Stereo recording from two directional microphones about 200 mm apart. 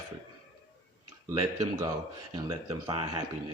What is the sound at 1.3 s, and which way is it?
A man's voice, 15° right (ahead or behind).